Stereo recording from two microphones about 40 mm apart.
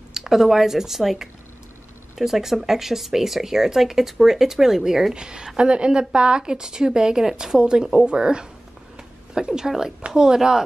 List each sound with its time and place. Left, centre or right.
0.1 s a woman's voice: centre